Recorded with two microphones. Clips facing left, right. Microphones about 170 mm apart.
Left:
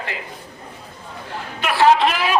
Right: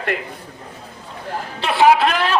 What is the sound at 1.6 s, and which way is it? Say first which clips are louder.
Speech: right 2 dB; 25° right (ahead or behind).